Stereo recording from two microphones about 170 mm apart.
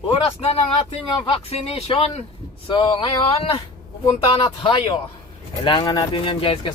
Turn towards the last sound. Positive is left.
turn(degrees=30)  # may be behind; listen again after turning